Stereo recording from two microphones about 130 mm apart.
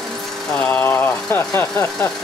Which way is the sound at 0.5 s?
15° left (ahead or behind).